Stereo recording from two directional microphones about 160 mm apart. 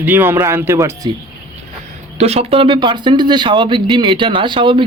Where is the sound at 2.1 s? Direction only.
40° right (ahead or behind).